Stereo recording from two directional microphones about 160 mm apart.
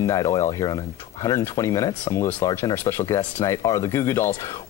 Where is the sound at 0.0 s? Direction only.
20° left (ahead or behind).